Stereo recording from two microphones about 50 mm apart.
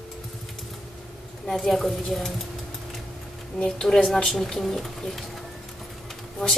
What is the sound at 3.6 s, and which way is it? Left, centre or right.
Speech, centre.